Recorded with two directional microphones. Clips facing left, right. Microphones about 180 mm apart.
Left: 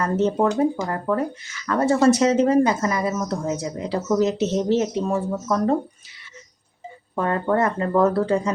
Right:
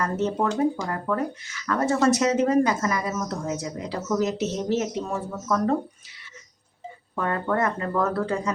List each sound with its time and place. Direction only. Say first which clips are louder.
0.0 s speech: left 5 dB; 30° left (ahead or behind)
7.2 s speech: left 4 dB; 30° left (ahead or behind)